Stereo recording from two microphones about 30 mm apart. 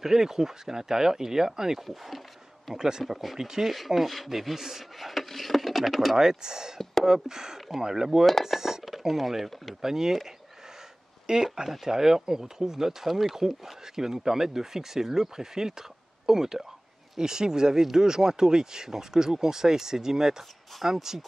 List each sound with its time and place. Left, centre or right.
0.0 s speech: centre
1.9 s speech: centre
2.7 s speech: centre
3.0 s speech: centre
3.3 s speech: centre
3.7 s speech: centre
6.1 s speech: right
8.5 s a sound: centre
8.8 s speech: centre
9.8 s speech: centre
11.2 s speech: right